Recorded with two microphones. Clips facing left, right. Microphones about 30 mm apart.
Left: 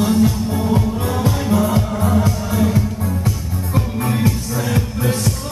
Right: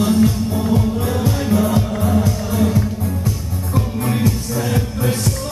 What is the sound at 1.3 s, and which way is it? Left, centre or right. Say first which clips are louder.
Music: right 1 dB; centre.